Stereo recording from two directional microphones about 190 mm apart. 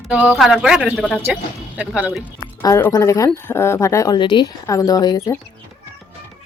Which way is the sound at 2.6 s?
15° left (ahead or behind).